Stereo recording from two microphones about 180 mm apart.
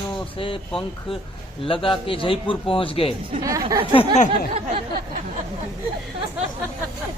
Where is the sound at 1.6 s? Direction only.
30° left (ahead or behind).